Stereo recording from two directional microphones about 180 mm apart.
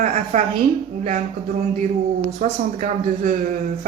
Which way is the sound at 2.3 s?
45° right (ahead or behind).